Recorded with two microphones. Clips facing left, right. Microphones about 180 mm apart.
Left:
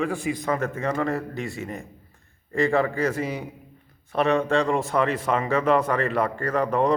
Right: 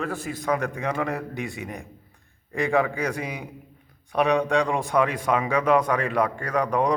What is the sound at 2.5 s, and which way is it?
Speech, centre (ahead or behind).